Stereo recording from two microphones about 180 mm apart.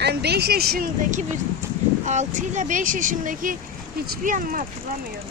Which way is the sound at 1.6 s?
15° right (ahead or behind).